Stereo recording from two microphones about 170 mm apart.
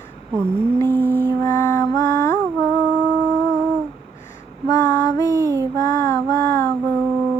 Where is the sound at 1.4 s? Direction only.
15° left (ahead or behind).